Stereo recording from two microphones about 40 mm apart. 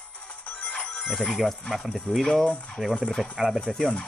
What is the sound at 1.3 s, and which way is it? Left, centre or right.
Speech, centre.